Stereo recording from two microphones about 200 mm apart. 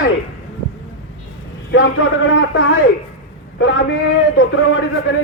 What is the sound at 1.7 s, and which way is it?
A man's voice, 70° left (ahead or behind).